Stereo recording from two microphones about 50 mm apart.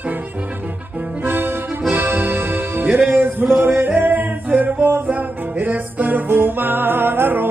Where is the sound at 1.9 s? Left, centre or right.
Right.